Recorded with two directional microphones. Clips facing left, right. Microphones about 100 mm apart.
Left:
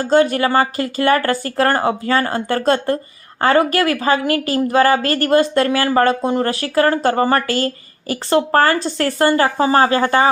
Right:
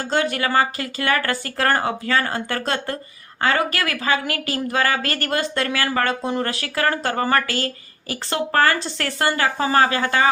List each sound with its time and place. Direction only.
0.1 s a woman's voice: 35° left (ahead or behind)